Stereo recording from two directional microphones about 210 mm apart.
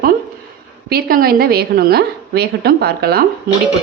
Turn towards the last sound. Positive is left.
turn(degrees=-45)  # may be behind; listen again after turning